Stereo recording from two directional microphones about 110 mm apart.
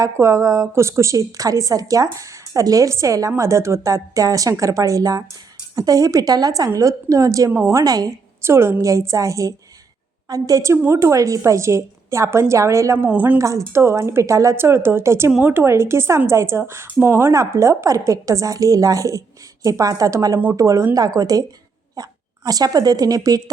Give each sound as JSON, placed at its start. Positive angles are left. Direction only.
{"t": 0.0, "sound": "a woman's voice", "side_deg": -25}
{"t": 13.1, "sound": "speech", "side_deg": -15}
{"t": 13.4, "sound": "a woman's voice", "side_deg": -30}
{"t": 15.3, "sound": "speech", "side_deg": -10}
{"t": 15.5, "sound": "a woman's voice", "side_deg": -25}